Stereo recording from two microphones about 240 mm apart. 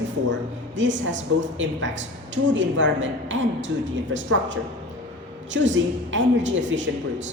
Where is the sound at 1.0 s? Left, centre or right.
Right.